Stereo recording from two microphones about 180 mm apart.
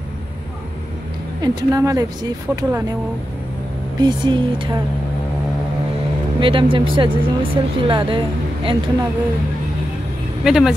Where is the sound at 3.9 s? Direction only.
25° right (ahead or behind).